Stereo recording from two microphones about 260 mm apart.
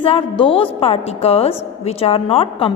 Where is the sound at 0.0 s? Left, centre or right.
Centre.